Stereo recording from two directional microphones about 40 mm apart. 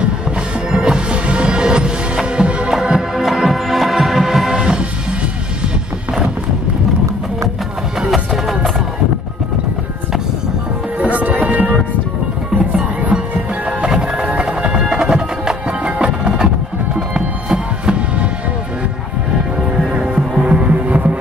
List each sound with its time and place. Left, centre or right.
0.7 s music: centre
2.7 s music: centre
4.6 s music: right
8.1 s music: centre
11.1 s music: right
12.5 s music: right
13.8 s music: centre
14.8 s music: centre
19.9 s music: right